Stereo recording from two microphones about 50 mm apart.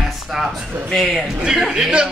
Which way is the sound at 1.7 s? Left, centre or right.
Centre.